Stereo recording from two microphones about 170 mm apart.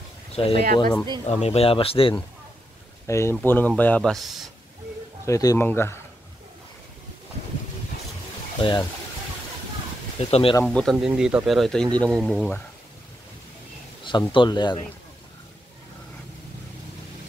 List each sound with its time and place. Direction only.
0.3 s speech: 35° left (ahead or behind)
1.2 s speech: 40° left (ahead or behind)
3.1 s speech: 15° left (ahead or behind); by 4.5 s centre (ahead or behind)
5.2 s speech: 20° left (ahead or behind)
8.5 s speech: 30° left (ahead or behind)
10.1 s speech: 35° left (ahead or behind)
10.6 s speech: centre (ahead or behind)
14.3 s speech: 25° left (ahead or behind)